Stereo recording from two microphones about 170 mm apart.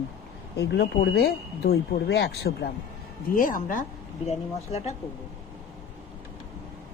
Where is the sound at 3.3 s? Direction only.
50° left (ahead or behind).